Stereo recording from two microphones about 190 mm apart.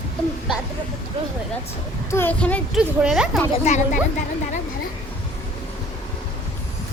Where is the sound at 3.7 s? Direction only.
35° left (ahead or behind).